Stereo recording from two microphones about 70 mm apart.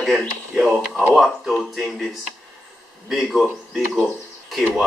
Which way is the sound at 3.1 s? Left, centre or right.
Centre.